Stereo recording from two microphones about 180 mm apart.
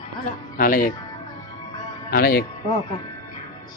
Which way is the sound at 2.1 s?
60° left (ahead or behind).